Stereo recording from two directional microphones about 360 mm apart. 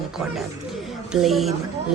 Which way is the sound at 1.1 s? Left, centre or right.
Centre.